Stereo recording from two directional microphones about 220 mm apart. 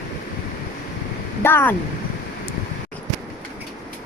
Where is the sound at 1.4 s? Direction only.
10° left (ahead or behind).